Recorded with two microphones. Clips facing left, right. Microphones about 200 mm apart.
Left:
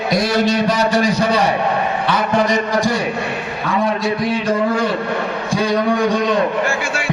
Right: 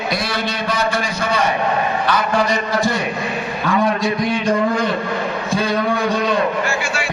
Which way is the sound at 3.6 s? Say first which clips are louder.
Even; centre (ahead or behind).